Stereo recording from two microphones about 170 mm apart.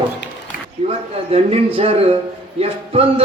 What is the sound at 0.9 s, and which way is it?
Speech, 35° right (ahead or behind).